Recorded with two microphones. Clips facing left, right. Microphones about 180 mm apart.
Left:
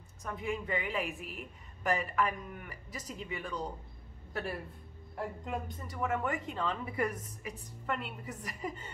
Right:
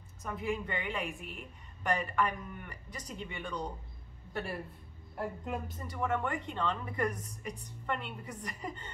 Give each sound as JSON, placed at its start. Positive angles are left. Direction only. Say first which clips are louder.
{"t": 0.2, "sound": "a woman's voice", "louder": "right 1 dB", "side_deg": 0}